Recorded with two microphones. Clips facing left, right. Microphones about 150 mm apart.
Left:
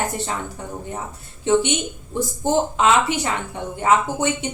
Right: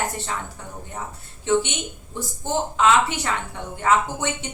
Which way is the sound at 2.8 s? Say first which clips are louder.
Right 3 dB; 15° left (ahead or behind).